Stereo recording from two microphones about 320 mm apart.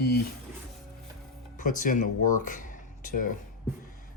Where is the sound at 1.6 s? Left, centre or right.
Left.